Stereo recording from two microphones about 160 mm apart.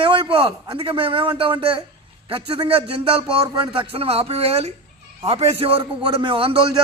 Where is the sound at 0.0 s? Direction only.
30° right (ahead or behind).